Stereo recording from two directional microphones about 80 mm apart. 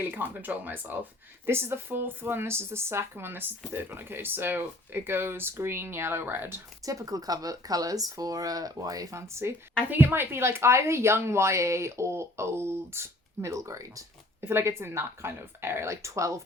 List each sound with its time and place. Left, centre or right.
0.0 s a woman's voice: right
6.8 s a woman's voice: right